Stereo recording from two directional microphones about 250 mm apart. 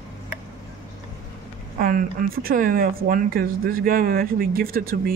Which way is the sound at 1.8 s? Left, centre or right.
Right.